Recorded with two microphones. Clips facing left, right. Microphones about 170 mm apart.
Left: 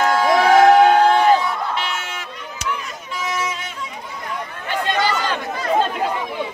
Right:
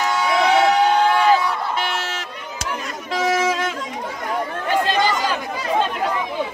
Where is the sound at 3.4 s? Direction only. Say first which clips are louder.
Right 8 dB; 90° right.